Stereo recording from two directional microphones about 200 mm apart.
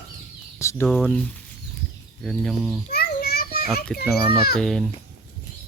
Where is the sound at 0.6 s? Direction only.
15° left (ahead or behind).